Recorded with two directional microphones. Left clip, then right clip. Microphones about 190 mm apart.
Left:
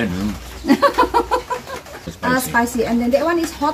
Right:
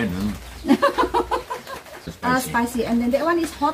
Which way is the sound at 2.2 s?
10° left (ahead or behind).